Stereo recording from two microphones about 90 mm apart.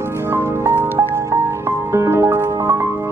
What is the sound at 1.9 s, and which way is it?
Music, 30° right (ahead or behind).